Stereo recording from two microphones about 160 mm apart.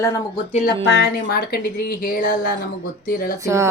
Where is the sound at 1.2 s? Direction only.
75° left (ahead or behind).